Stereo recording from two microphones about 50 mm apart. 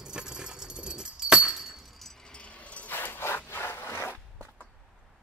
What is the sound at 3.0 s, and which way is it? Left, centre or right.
Wood, left.